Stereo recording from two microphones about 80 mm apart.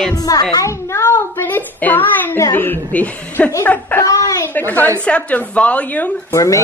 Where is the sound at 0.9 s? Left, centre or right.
Left.